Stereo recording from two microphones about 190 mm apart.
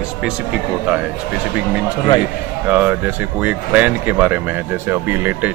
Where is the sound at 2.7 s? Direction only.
10° right (ahead or behind).